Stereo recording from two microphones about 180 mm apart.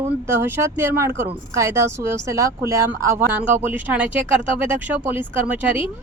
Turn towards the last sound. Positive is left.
turn(degrees=-10)  # may be behind; listen again after turning